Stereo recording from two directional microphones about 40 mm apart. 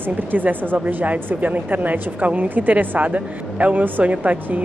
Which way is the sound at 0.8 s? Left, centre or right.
Right.